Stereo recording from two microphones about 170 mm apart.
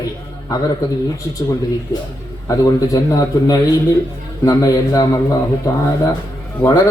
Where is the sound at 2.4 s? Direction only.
20° left (ahead or behind).